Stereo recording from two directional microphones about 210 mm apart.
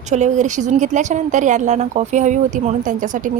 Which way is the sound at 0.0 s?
35° right (ahead or behind).